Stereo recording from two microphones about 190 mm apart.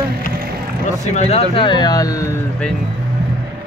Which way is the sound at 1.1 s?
35° left (ahead or behind).